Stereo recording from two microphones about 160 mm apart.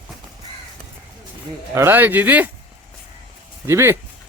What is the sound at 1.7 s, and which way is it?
Speech, 15° right (ahead or behind).